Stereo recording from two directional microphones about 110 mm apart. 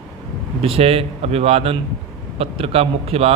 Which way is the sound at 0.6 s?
60° right (ahead or behind).